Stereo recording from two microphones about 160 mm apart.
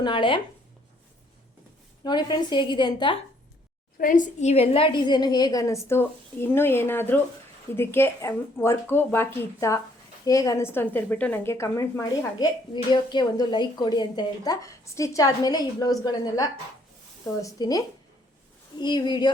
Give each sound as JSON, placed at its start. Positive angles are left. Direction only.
{"t": 0.0, "sound": "speech", "side_deg": 30}
{"t": 2.0, "sound": "a woman's voice", "side_deg": 25}
{"t": 3.9, "sound": "a woman's voice", "side_deg": 55}